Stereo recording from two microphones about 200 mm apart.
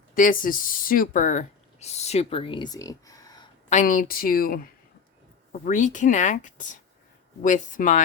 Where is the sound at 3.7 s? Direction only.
40° left (ahead or behind).